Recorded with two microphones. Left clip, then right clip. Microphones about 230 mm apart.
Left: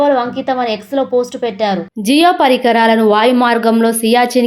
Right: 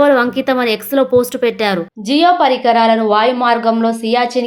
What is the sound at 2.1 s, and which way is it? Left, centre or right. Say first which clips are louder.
A woman's voice: left 1 dB; left.